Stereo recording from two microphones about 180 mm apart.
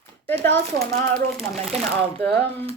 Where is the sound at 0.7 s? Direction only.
65° right (ahead or behind).